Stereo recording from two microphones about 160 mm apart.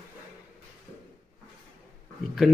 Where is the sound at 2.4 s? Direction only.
Centre (ahead or behind).